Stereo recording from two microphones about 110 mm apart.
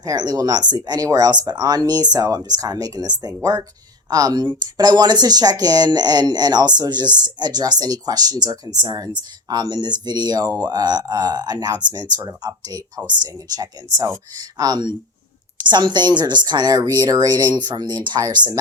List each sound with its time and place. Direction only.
0.0 s speech: 35° right (ahead or behind)